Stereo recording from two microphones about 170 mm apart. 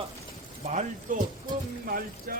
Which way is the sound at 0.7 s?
45° right (ahead or behind).